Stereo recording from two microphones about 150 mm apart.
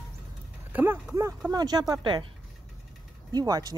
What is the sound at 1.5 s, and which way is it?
Speech, 25° right (ahead or behind).